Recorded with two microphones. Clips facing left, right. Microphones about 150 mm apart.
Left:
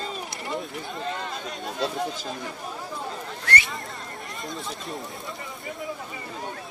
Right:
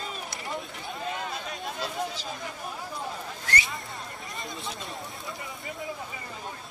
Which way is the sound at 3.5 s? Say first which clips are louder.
Left 4 dB; 70° left (ahead or behind).